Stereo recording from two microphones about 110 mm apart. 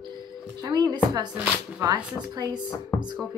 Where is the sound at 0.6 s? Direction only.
40° right (ahead or behind).